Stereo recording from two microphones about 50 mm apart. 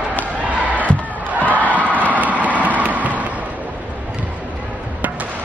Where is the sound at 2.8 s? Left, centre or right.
Right.